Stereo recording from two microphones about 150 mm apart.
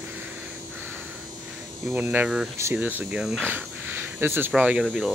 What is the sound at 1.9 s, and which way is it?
Speech, 10° right (ahead or behind).